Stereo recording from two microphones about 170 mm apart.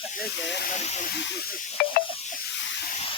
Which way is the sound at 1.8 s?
65° left (ahead or behind).